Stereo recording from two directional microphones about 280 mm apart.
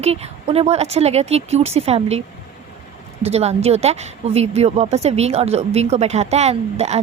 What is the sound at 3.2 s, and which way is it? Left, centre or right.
Speech, right.